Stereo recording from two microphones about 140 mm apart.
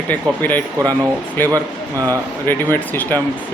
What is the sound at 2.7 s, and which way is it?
Speech, 15° left (ahead or behind).